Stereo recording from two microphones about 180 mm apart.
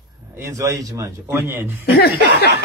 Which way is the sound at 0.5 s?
20° right (ahead or behind).